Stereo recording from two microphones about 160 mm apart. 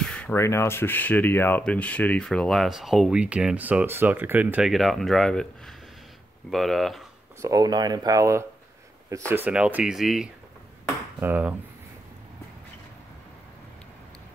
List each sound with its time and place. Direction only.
0.0 s speech: 5° left (ahead or behind)
7.4 s speech: 25° right (ahead or behind)